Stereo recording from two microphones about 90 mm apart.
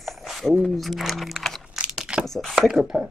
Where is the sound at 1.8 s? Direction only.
10° right (ahead or behind).